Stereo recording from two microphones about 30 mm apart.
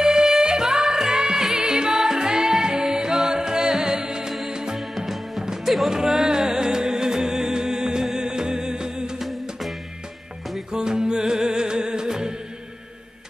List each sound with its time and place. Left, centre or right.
0.0 s music: right
4.7 s music: centre
5.9 s music: centre
9.2 s music: centre
10.7 s music: right